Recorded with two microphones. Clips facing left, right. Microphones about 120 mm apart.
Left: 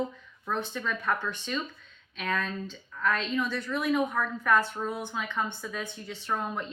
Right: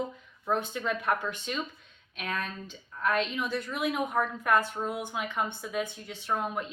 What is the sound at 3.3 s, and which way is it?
Speech, 15° right (ahead or behind).